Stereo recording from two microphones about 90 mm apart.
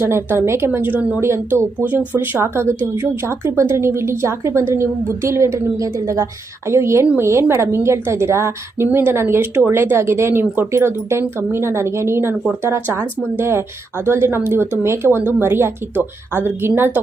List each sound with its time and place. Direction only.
0.0 s a woman's voice: 30° right (ahead or behind)